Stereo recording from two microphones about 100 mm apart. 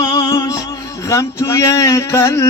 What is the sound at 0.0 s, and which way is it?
Music, 35° left (ahead or behind).